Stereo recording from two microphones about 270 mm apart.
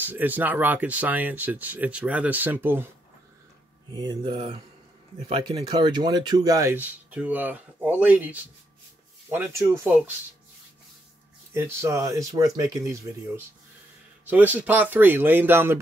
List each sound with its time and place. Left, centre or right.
0.0 s speech: centre
3.9 s speech: centre
11.5 s speech: centre
14.2 s speech: centre